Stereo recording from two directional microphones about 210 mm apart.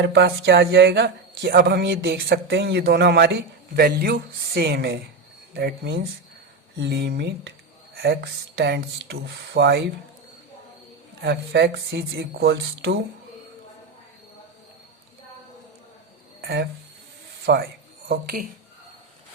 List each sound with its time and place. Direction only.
0.0 s speech: 50° right (ahead or behind)
11.2 s speech: 50° right (ahead or behind)
16.4 s speech: 50° right (ahead or behind)